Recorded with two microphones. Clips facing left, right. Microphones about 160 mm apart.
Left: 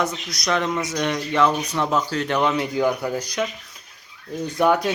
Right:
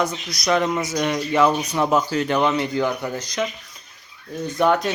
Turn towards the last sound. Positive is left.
turn(degrees=10)  # may be behind; listen again after turning